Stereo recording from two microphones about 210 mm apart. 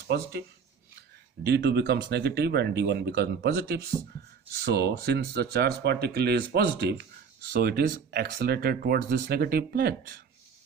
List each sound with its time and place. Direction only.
0.1 s speech: 50° right (ahead or behind)
1.5 s speech: 50° right (ahead or behind)